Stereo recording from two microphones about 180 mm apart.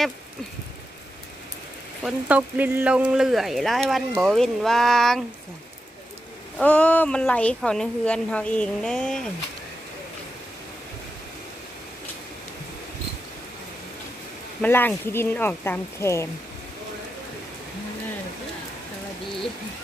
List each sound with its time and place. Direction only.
2.0 s speech: 5° right (ahead or behind)
6.6 s speech: 5° left (ahead or behind)
14.6 s speech: 10° left (ahead or behind)